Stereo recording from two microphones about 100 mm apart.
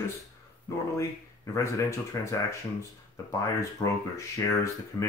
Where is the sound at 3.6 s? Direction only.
30° left (ahead or behind).